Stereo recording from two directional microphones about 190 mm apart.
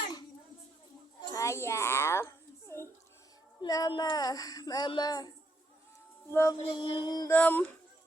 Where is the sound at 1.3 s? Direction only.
15° left (ahead or behind).